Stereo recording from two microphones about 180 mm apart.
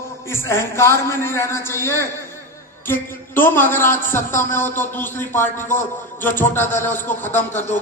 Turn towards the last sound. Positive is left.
turn(degrees=10)  # may be behind; listen again after turning